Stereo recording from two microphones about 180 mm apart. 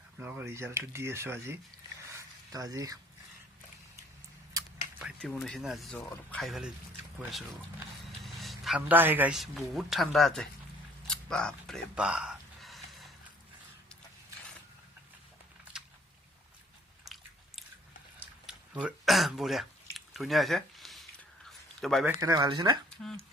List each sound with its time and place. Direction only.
0.2 s speech: 10° right (ahead or behind)
2.0 s a sound: 20° right (ahead or behind)
5.2 s speech: centre (ahead or behind)
6.0 s speech: 15° left (ahead or behind)
6.4 s speech: centre (ahead or behind)
8.2 s a man's voice: centre (ahead or behind)
11.0 s a sound: 5° left (ahead or behind)
15.7 s a sound: 5° right (ahead or behind)
17.1 s biting: centre (ahead or behind)
18.2 s a sound: 5° right (ahead or behind)
21.8 s a man's voice: centre (ahead or behind)
22.2 s speech: 20° right (ahead or behind)
23.0 s speech: 5° left (ahead or behind)